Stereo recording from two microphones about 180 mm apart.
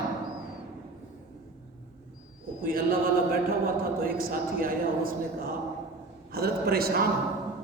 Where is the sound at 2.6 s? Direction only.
55° right (ahead or behind).